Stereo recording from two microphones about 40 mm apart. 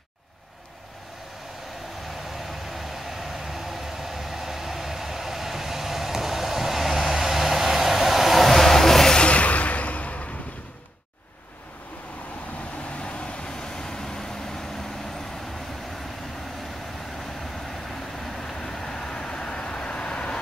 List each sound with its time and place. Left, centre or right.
2.0 s vehicle: centre
9.1 s a sound: left
13.0 s vehicle: left
18.2 s vehicle: centre